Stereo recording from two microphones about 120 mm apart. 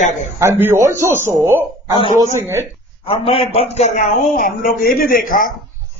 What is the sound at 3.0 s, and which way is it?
Speech, 50° left (ahead or behind).